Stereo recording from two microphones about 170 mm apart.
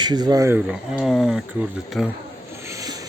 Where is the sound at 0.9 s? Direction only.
Centre (ahead or behind).